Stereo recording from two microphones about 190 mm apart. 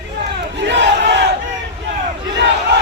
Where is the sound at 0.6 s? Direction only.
65° right (ahead or behind).